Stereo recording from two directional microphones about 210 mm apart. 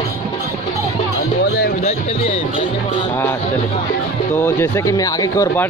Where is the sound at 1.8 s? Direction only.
30° left (ahead or behind).